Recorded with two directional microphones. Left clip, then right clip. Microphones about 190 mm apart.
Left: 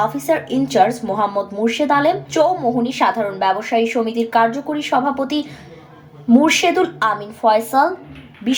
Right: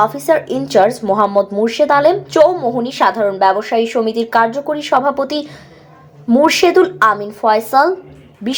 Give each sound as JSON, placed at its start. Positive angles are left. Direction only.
{"t": 0.0, "sound": "speech", "side_deg": -35}